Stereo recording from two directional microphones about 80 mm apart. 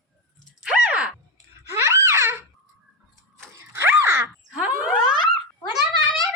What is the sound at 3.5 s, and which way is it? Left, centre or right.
Dog, right.